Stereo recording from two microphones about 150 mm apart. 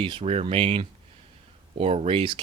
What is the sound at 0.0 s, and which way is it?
Speech, 40° right (ahead or behind).